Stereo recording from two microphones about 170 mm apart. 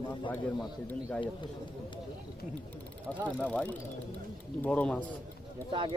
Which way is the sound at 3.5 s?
5° left (ahead or behind).